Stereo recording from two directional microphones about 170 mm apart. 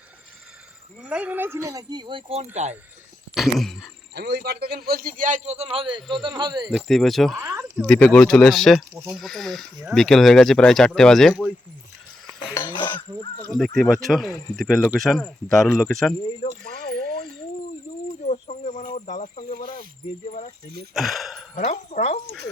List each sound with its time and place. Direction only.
1.0 s speech: 10° right (ahead or behind); by 2.5 s 35° right (ahead or behind)
3.3 s speech: centre (ahead or behind)
4.1 s a man's voice: 75° right (ahead or behind); by 6.7 s 25° right (ahead or behind)
6.7 s speech: centre (ahead or behind)
12.5 s cutlery: 25° left (ahead or behind)
13.6 s speech: centre (ahead or behind)
16.4 s speech: 35° left (ahead or behind)
18.2 s snake: 40° left (ahead or behind)
20.2 s speech: 45° left (ahead or behind)
20.9 s speech: centre (ahead or behind)
21.5 s speech: 40° left (ahead or behind)